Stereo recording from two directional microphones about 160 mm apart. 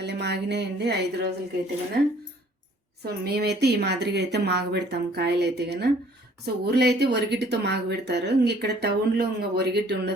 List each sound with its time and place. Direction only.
0.0 s speech: 90° right
3.0 s speech: 90° right